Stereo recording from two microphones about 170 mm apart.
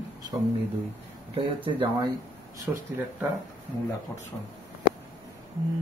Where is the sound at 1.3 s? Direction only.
30° right (ahead or behind).